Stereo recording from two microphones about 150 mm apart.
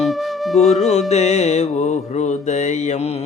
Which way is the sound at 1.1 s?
45° left (ahead or behind).